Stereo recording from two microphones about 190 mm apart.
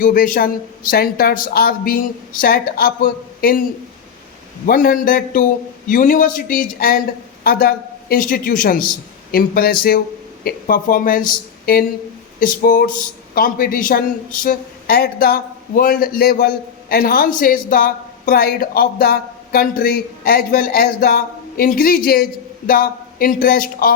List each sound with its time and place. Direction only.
0.0 s speech: 45° left (ahead or behind)
4.6 s speech: 50° left (ahead or behind)